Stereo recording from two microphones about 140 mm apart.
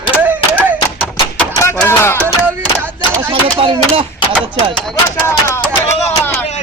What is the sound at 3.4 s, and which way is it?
Speech, 40° right (ahead or behind).